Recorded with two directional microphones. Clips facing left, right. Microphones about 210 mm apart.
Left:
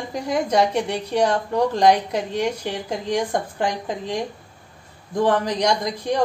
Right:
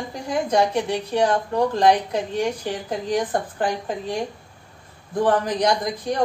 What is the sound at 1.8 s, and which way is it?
Speech, 10° left (ahead or behind).